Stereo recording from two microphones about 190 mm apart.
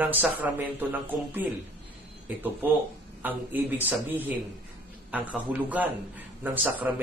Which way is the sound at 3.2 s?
10° right (ahead or behind).